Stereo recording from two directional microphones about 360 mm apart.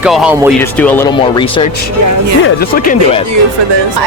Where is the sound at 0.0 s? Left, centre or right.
Centre.